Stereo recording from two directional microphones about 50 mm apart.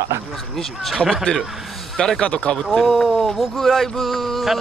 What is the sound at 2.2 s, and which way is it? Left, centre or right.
Speech, left.